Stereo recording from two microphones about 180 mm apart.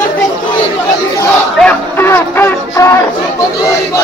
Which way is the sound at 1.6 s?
10° left (ahead or behind).